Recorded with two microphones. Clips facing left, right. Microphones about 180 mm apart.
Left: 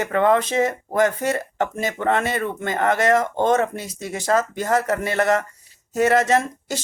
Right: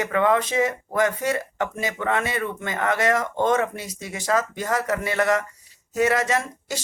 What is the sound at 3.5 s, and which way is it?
Speech, 40° left (ahead or behind).